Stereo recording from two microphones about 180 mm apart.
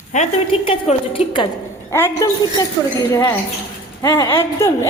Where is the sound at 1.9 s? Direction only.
15° left (ahead or behind).